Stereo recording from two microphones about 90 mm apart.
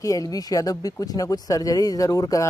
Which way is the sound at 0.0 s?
40° left (ahead or behind).